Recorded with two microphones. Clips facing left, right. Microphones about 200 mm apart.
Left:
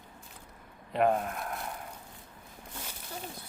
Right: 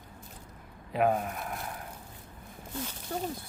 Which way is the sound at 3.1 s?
50° right (ahead or behind).